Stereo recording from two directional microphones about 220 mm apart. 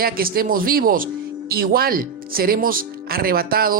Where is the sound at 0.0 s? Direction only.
40° right (ahead or behind).